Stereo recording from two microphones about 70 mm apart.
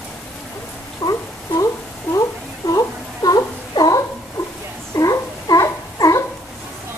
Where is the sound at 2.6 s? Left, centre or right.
Left.